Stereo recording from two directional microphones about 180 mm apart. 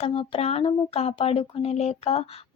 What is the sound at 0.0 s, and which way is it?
Speech, 30° left (ahead or behind).